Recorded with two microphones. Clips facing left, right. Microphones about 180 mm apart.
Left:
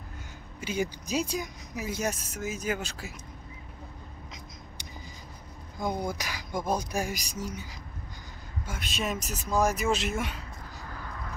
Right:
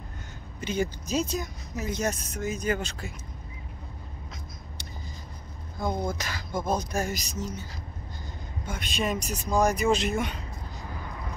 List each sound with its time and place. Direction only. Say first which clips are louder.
0.6 s speech: right 2 dB; 10° left (ahead or behind)
5.8 s speech: right 2 dB; 15° left (ahead or behind)
8.6 s speech: right 3 dB; centre (ahead or behind)
10.8 s vehicle: right 2 dB; 15° right (ahead or behind)